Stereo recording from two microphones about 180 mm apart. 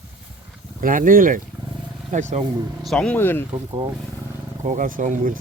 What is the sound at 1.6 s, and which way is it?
Roaring cats, 25° right (ahead or behind).